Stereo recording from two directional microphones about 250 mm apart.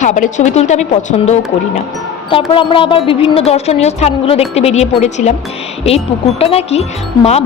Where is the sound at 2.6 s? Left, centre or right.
Centre.